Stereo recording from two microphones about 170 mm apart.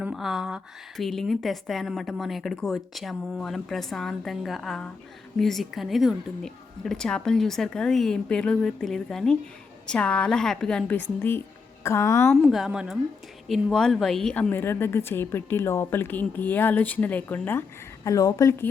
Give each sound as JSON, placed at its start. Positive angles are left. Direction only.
{"t": 0.0, "sound": "a woman's voice", "side_deg": 0}
{"t": 12.3, "sound": "a woman's voice", "side_deg": 0}